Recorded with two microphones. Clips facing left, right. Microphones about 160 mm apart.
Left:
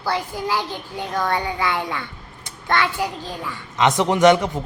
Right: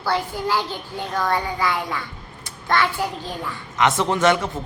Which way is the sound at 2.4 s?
20° left (ahead or behind).